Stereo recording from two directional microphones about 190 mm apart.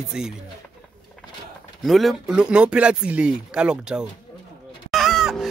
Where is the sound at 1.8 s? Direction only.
Centre (ahead or behind).